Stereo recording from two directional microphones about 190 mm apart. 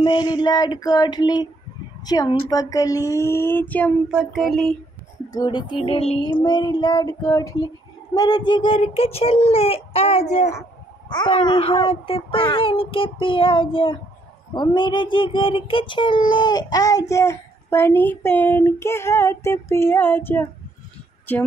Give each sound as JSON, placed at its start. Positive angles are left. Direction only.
{"t": 0.0, "sound": "child singing", "side_deg": 25}
{"t": 2.5, "sound": "speech", "side_deg": 20}
{"t": 4.1, "sound": "a sound", "side_deg": -5}
{"t": 5.3, "sound": "child singing", "side_deg": 20}
{"t": 11.1, "sound": "child singing", "side_deg": 25}
{"t": 17.1, "sound": "speech", "side_deg": 15}